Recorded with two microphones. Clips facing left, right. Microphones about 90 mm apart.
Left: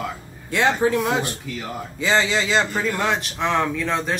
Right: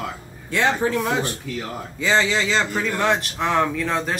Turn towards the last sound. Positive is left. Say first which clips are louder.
# even
turn(degrees=-5)  # may be behind; listen again after turning